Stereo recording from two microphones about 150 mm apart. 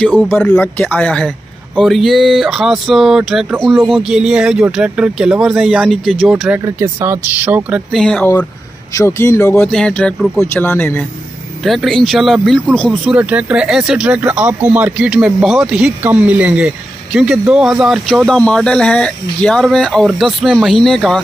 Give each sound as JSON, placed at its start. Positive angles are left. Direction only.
{"t": 0.3, "sound": "speech", "side_deg": 10}
{"t": 6.6, "sound": "speech", "side_deg": -15}
{"t": 7.9, "sound": "speech", "side_deg": 5}
{"t": 8.9, "sound": "speech", "side_deg": 20}
{"t": 9.7, "sound": "speech", "side_deg": 5}
{"t": 13.2, "sound": "speech", "side_deg": -10}